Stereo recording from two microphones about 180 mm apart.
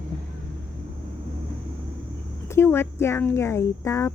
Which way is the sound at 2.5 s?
15° left (ahead or behind).